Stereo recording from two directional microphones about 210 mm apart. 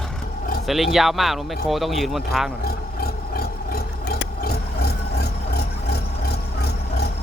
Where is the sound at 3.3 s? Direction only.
45° left (ahead or behind).